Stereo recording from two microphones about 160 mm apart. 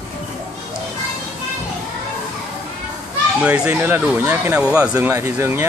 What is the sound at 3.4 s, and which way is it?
Speech, 5° right (ahead or behind).